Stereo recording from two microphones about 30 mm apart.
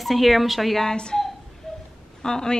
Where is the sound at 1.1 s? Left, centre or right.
Centre.